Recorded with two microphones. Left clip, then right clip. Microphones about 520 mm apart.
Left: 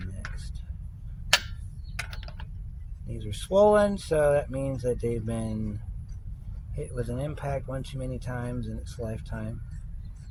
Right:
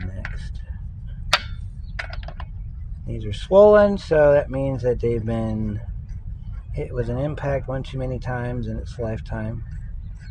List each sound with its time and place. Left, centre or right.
2.0 s computer keyboard: left
3.1 s speech: left
6.7 s speech: left